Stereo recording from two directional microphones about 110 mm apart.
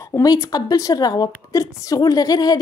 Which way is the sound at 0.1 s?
35° left (ahead or behind).